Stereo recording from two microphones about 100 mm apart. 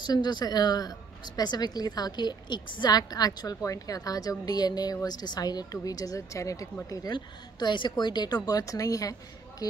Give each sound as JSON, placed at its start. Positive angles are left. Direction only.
{"t": 0.0, "sound": "speech", "side_deg": 45}
{"t": 7.1, "sound": "speech", "side_deg": 50}